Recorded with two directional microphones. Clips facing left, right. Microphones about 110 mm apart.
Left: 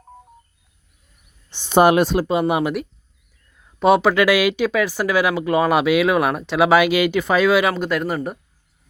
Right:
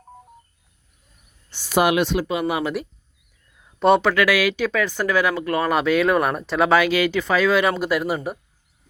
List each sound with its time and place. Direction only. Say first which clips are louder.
1.5 s cricket: left 4 dB; 20° left (ahead or behind)
1.8 s speech: left 5 dB; 40° left (ahead or behind)
3.8 s speech: left 2 dB; 5° left (ahead or behind)
4.1 s speech: left 3 dB; 20° left (ahead or behind)
7.7 s speech: even; 5° right (ahead or behind)